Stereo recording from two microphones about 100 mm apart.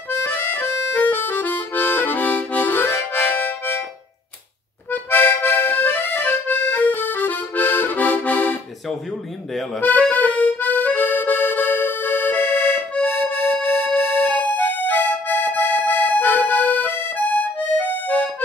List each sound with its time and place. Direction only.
0.1 s harmonica: 20° left (ahead or behind)
4.9 s accordion: 20° left (ahead or behind)
9.8 s music: 15° left (ahead or behind)